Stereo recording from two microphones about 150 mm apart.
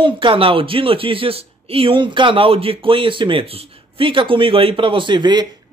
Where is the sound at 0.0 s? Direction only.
35° right (ahead or behind).